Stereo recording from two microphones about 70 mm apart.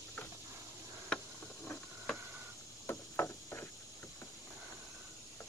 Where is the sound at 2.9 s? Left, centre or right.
Left.